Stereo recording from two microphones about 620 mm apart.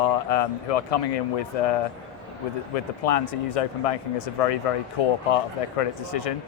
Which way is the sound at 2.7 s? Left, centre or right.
Left.